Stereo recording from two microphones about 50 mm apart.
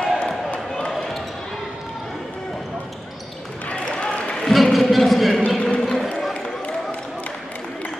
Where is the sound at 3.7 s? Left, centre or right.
Left.